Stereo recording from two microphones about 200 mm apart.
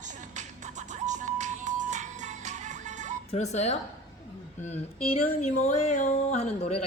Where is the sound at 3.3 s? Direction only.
35° left (ahead or behind).